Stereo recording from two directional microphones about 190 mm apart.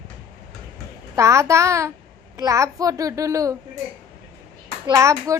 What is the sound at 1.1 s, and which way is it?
A child's voice, 15° right (ahead or behind).